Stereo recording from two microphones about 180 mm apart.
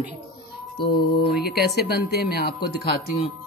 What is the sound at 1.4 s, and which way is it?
Speech, 60° left (ahead or behind).